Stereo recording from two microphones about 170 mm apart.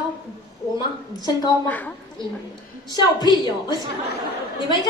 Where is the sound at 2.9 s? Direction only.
25° left (ahead or behind).